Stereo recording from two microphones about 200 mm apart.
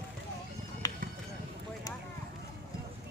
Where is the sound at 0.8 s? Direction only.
15° left (ahead or behind).